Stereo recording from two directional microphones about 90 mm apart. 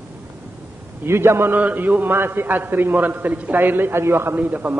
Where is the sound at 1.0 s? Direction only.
30° right (ahead or behind).